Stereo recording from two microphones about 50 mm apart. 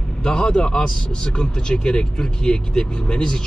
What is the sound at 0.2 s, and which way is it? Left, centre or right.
A man's voice, centre.